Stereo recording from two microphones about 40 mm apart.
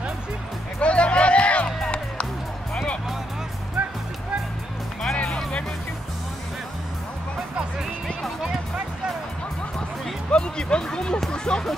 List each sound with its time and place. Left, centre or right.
0.7 s music: left
3.8 s music: right
5.1 s music: left
10.3 s music: left